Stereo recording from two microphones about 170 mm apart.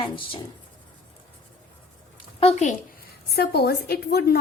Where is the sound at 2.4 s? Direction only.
40° left (ahead or behind).